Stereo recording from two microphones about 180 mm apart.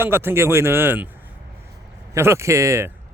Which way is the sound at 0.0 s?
10° right (ahead or behind).